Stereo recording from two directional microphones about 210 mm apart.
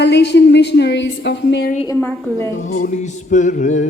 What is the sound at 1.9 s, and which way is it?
Speech, 10° left (ahead or behind).